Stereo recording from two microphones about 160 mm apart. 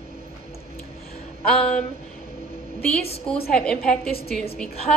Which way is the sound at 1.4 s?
5° left (ahead or behind).